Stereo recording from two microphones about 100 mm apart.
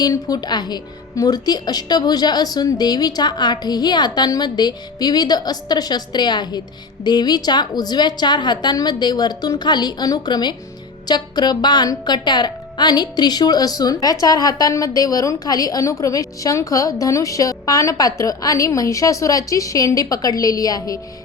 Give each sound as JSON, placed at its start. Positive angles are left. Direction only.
{"t": 0.0, "sound": "a woman's voice", "side_deg": 40}